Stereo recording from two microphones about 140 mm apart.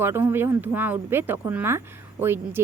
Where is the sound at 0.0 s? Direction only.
15° right (ahead or behind).